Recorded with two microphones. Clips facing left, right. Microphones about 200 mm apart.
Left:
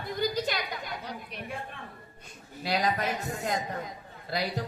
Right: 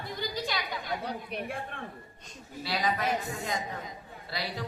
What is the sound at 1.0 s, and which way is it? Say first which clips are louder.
Speech: right 4 dB; 55° right (ahead or behind).